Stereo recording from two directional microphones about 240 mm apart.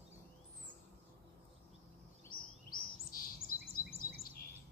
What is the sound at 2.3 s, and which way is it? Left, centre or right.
Chirp, left.